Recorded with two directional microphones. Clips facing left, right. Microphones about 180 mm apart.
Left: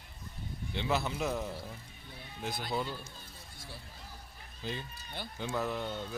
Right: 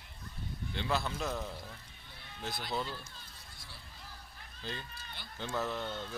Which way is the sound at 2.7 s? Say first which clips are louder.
Left 2 dB; 10° left (ahead or behind).